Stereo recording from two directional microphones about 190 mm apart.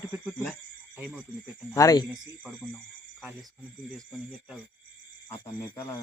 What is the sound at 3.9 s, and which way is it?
Speech, centre (ahead or behind).